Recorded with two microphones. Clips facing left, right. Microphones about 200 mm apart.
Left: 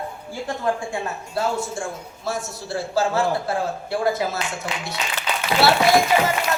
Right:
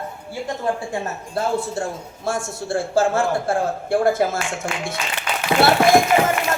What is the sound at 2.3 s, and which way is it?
A man's voice, 50° right (ahead or behind).